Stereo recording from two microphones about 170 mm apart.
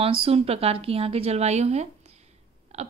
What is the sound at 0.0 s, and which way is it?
A woman's voice, 35° right (ahead or behind).